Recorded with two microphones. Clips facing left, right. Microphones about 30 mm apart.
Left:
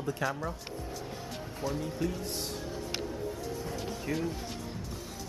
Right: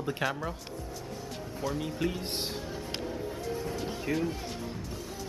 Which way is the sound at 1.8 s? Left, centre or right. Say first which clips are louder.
Right 1 dB; right.